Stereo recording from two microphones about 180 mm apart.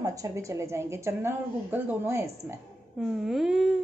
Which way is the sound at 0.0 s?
20° right (ahead or behind).